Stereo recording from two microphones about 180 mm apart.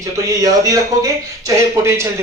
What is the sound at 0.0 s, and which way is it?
A man's voice, 20° right (ahead or behind).